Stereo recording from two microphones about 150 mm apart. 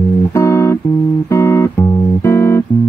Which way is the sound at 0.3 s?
20° left (ahead or behind).